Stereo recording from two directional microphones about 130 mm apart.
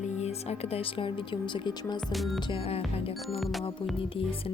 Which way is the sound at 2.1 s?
Centre (ahead or behind).